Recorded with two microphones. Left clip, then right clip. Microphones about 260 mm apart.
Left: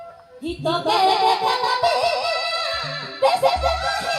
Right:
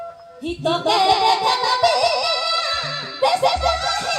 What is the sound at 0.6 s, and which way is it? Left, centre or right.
Music, right.